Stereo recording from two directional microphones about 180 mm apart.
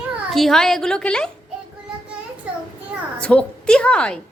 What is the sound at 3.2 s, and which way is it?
Speech, 5° left (ahead or behind).